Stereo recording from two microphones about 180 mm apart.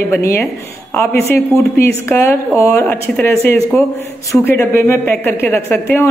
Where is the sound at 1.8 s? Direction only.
15° left (ahead or behind).